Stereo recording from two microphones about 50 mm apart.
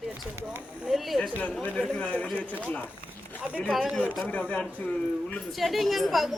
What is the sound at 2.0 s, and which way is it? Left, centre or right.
Speech, left.